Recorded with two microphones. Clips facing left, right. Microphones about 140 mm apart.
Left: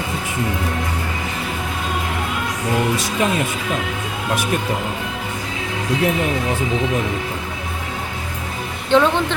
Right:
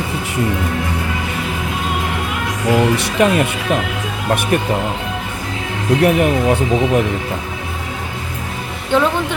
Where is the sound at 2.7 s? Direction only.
65° right (ahead or behind).